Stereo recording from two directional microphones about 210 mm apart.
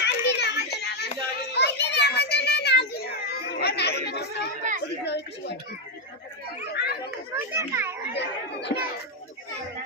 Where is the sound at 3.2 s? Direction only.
50° left (ahead or behind).